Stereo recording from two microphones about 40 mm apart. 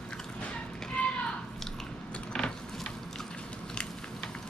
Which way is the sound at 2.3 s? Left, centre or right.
Centre.